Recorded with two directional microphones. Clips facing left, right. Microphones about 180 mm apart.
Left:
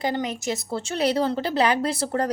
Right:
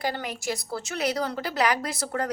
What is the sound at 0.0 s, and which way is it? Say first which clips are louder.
A woman's voice: left 4 dB; 20° left (ahead or behind).